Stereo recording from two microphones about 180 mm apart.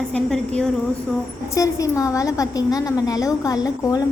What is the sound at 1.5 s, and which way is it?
A woman's voice, 15° left (ahead or behind).